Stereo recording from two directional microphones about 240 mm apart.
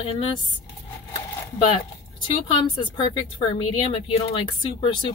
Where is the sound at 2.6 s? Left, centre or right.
Centre.